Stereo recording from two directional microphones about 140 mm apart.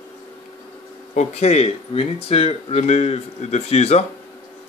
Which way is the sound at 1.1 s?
50° left (ahead or behind).